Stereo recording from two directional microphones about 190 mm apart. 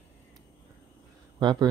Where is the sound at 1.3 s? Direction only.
20° right (ahead or behind).